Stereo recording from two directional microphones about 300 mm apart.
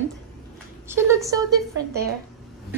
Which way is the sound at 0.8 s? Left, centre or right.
Centre.